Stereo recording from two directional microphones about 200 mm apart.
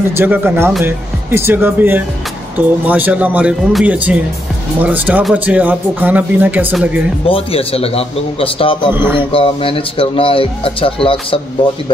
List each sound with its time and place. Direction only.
0.1 s speech: 10° right (ahead or behind)
7.2 s speech: 30° left (ahead or behind)
8.9 s speech: 10° right (ahead or behind)
9.3 s speech: 25° left (ahead or behind)